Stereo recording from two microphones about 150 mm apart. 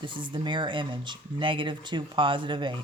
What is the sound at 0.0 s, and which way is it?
Speech, 30° right (ahead or behind).